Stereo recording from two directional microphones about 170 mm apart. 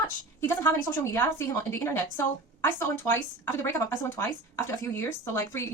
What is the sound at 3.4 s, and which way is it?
Speech, 20° left (ahead or behind).